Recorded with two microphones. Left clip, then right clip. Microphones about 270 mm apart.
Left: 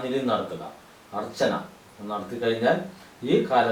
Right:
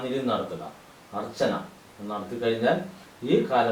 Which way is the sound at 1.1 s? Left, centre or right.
Centre.